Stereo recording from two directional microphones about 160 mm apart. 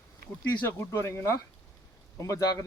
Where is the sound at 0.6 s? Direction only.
15° left (ahead or behind).